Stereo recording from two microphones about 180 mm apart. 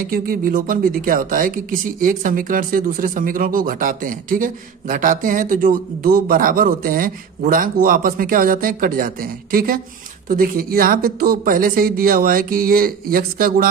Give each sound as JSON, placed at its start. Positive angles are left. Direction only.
{"t": 0.0, "sound": "speech", "side_deg": -55}